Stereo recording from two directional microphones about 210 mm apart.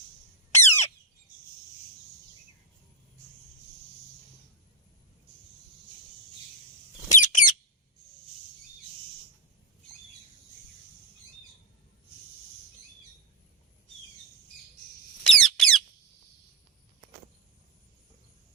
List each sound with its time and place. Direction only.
0.5 s squawk: 10° left (ahead or behind)
7.1 s a sound: 35° left (ahead or behind)
15.2 s squeak: centre (ahead or behind)